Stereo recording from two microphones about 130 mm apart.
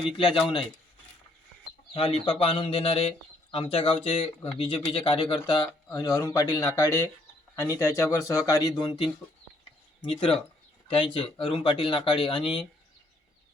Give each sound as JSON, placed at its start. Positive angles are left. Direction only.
{"t": 0.2, "sound": "speech", "side_deg": 45}
{"t": 1.9, "sound": "speech", "side_deg": 45}